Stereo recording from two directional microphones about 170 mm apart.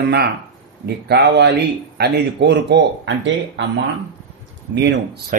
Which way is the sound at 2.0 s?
90° right.